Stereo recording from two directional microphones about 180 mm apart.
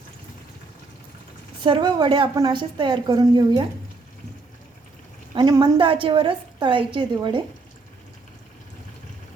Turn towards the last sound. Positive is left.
turn(degrees=-25)  # may be behind; listen again after turning